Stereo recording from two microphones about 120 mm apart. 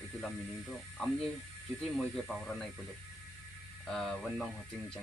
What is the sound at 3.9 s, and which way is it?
Speech, centre (ahead or behind).